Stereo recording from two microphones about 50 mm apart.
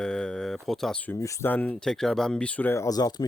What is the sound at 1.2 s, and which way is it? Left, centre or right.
Speech, left.